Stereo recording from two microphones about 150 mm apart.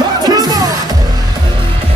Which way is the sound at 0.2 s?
25° right (ahead or behind).